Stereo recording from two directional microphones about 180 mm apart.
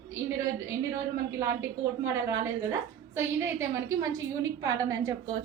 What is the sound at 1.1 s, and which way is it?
A woman's voice, 15° right (ahead or behind).